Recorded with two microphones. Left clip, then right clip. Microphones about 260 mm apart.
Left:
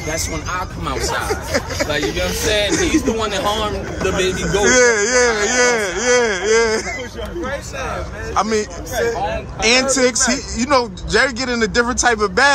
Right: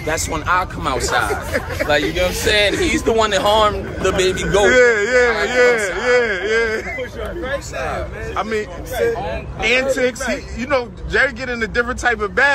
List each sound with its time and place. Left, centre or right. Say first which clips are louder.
0.1 s speech: right 6 dB; centre
4.6 s speech: even; centre
8.4 s speech: left 4 dB; centre